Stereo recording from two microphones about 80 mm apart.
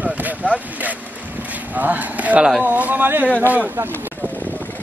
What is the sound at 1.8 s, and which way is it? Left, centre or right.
Speech, right.